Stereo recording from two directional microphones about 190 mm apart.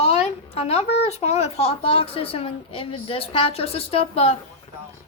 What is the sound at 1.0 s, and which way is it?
A woman's voice, 35° left (ahead or behind).